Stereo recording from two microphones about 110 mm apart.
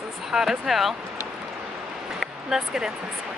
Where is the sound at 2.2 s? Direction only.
5° right (ahead or behind).